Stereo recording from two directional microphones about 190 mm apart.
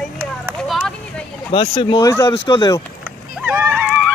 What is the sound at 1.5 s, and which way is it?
Speech, 30° left (ahead or behind).